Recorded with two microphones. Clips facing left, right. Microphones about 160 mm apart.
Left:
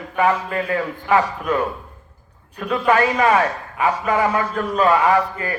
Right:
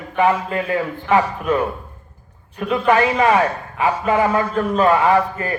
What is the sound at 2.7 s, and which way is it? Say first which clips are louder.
A man's voice: right 1 dB; 25° right (ahead or behind).